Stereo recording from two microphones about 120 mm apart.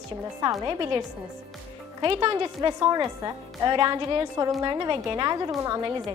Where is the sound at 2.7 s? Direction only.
40° right (ahead or behind).